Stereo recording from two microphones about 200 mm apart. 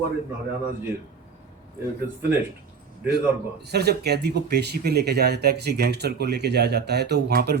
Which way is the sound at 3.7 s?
55° right (ahead or behind).